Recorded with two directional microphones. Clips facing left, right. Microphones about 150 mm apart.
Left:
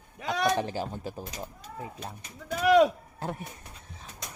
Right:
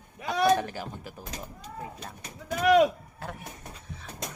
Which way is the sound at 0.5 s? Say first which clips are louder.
Left 2 dB; 25° left (ahead or behind).